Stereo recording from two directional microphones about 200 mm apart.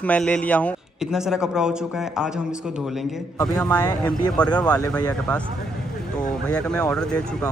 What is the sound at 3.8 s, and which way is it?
Speech, 20° left (ahead or behind).